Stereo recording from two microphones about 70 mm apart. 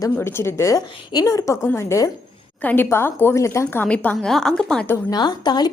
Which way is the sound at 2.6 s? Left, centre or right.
Left.